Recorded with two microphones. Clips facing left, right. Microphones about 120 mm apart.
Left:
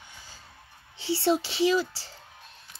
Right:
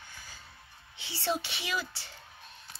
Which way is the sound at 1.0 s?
30° left (ahead or behind).